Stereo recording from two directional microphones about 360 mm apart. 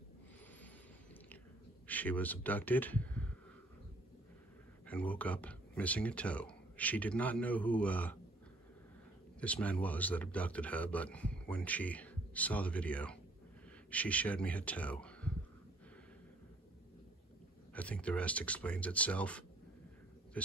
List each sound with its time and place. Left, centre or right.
1.9 s speech: centre
4.8 s speech: centre
9.4 s speech: centre
17.7 s speech: centre